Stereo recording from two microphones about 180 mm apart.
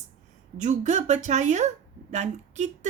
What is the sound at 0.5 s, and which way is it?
Speech, 40° right (ahead or behind).